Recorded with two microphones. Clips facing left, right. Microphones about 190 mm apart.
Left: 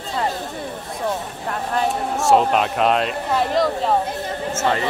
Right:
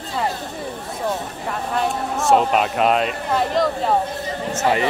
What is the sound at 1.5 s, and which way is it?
Speech, centre (ahead or behind).